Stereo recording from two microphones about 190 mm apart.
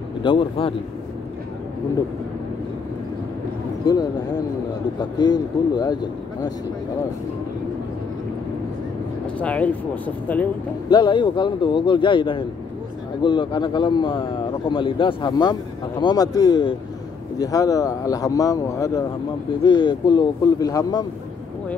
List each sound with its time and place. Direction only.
0.2 s speech: 25° left (ahead or behind)
3.8 s speech: 20° left (ahead or behind)
9.4 s speech: 10° left (ahead or behind)
10.9 s speech: 25° left (ahead or behind)